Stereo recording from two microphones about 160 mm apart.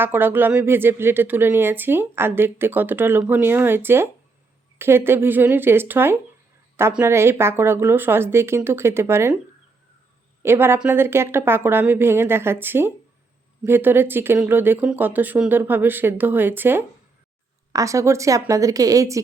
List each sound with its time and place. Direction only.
0.0 s speech: 15° right (ahead or behind)
10.4 s speech: 15° right (ahead or behind)